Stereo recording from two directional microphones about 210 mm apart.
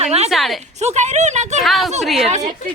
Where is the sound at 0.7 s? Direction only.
35° right (ahead or behind).